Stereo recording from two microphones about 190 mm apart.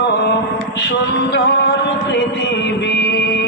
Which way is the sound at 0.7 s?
65° left (ahead or behind).